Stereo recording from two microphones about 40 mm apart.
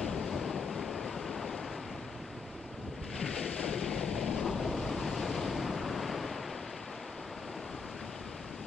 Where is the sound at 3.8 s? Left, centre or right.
Centre.